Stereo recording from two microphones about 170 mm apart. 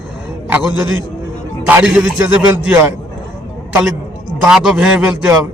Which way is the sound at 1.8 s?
Centre (ahead or behind).